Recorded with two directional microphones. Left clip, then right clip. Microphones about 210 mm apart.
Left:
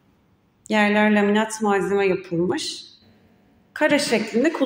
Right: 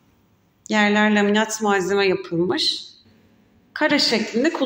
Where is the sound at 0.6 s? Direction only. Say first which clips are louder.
Even; 10° left (ahead or behind).